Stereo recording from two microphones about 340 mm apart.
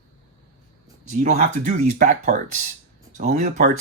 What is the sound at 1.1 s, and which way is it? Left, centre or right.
Speech, centre.